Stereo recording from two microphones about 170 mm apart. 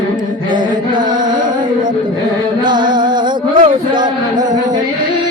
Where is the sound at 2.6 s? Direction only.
25° right (ahead or behind).